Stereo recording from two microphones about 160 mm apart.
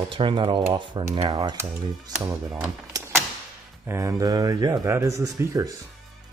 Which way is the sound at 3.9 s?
20° right (ahead or behind).